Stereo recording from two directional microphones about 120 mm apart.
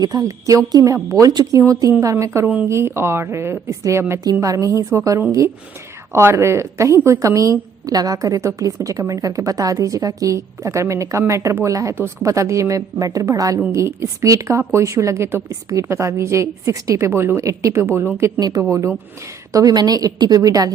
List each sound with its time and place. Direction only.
0.0 s a woman's voice: 30° right (ahead or behind)
18.3 s a woman's voice: 35° right (ahead or behind)